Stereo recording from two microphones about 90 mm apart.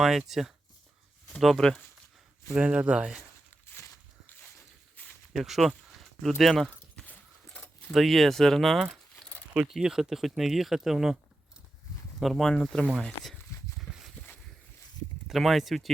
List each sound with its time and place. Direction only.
0.0 s speech: 5° right (ahead or behind)
2.6 s speech: 15° right (ahead or behind)
5.0 s a sound: 20° left (ahead or behind)
5.3 s speech: centre (ahead or behind)
6.9 s a sound: 20° left (ahead or behind)
7.9 s speech: centre (ahead or behind)
12.2 s speech: centre (ahead or behind)
13.7 s a sound: 5° right (ahead or behind)
15.3 s speech: centre (ahead or behind)